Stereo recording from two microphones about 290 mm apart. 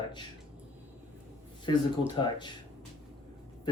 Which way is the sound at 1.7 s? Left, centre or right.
Centre.